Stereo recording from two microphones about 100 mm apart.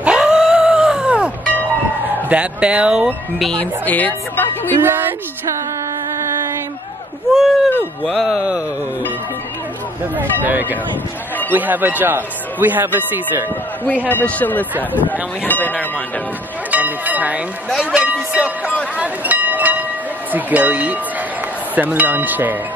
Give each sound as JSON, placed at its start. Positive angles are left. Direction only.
{"t": 0.0, "sound": "a sound", "side_deg": -10}
{"t": 2.2, "sound": "speech", "side_deg": -10}
{"t": 3.5, "sound": "a man's voice", "side_deg": 15}
{"t": 4.7, "sound": "a sound", "side_deg": -20}
{"t": 7.3, "sound": "speech", "side_deg": 0}
{"t": 8.3, "sound": "speech", "side_deg": -10}
{"t": 10.4, "sound": "speech", "side_deg": -20}
{"t": 13.8, "sound": "a man's voice", "side_deg": 20}
{"t": 16.7, "sound": "speech", "side_deg": -15}
{"t": 18.9, "sound": "a sound", "side_deg": -15}
{"t": 20.3, "sound": "speech", "side_deg": -15}